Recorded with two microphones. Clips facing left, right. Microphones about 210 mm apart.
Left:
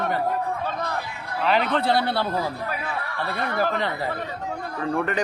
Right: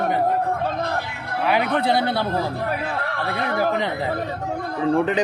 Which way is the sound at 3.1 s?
70° right (ahead or behind).